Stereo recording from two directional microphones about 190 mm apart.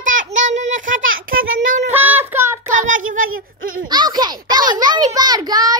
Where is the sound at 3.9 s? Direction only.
20° right (ahead or behind).